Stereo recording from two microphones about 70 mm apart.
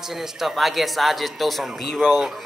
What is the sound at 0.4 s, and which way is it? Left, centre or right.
Speech, centre.